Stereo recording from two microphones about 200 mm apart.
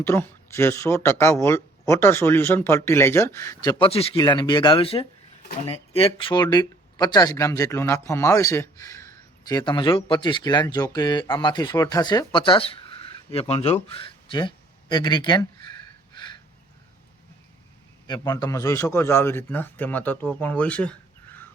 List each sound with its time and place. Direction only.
0.0 s speech: 10° left (ahead or behind)
16.1 s a sound: 20° left (ahead or behind)
18.1 s speech: 20° left (ahead or behind)